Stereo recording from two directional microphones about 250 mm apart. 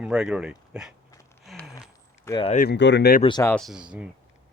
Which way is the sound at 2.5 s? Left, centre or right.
Left.